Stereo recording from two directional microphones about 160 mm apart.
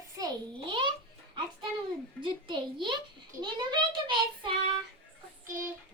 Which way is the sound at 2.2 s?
30° right (ahead or behind).